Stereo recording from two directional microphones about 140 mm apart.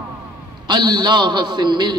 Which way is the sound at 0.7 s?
30° right (ahead or behind).